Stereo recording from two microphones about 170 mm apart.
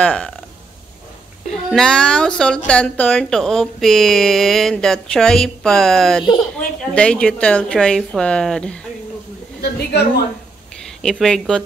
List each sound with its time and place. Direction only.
0.0 s speech: 5° left (ahead or behind)
1.7 s speech: 5° left (ahead or behind)
9.6 s a woman's voice: 70° left (ahead or behind)
11.0 s speech: centre (ahead or behind)